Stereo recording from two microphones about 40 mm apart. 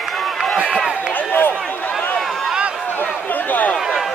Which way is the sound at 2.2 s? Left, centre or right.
Centre.